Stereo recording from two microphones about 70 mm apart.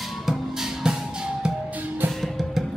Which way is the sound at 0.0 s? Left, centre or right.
Centre.